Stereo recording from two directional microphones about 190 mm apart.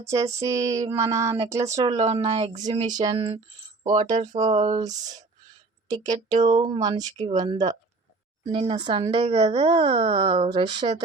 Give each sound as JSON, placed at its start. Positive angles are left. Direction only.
{"t": 0.0, "sound": "a sound", "side_deg": -15}
{"t": 2.0, "sound": "speech", "side_deg": -30}
{"t": 4.8, "sound": "speech", "side_deg": -20}
{"t": 8.4, "sound": "speech", "side_deg": -30}